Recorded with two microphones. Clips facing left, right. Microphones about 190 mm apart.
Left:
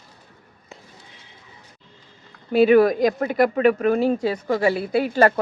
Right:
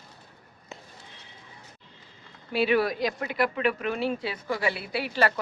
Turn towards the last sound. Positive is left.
turn(degrees=45)  # may be behind; listen again after turning